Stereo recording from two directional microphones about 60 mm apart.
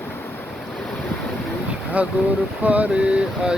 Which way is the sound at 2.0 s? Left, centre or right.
Right.